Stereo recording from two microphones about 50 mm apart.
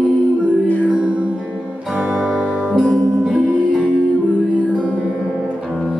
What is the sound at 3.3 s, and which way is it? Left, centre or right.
Music, right.